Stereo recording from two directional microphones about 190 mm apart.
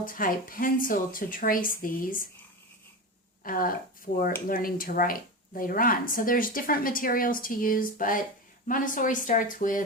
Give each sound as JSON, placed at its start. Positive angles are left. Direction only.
{"t": 0.0, "sound": "speech", "side_deg": 45}
{"t": 3.4, "sound": "speech", "side_deg": 50}